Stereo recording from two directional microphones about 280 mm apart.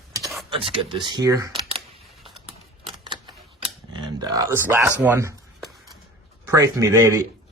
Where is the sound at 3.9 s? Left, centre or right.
Centre.